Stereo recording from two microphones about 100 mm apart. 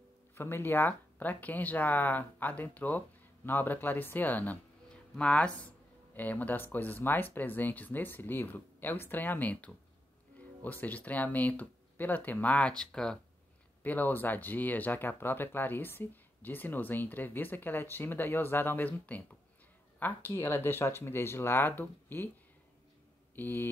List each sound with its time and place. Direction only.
0.3 s speech: 20° left (ahead or behind); by 13.2 s 5° left (ahead or behind)
13.8 s speech: 20° left (ahead or behind)
23.3 s speech: 20° left (ahead or behind)